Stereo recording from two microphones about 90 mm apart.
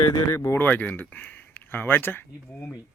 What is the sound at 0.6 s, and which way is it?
Speech, 20° left (ahead or behind).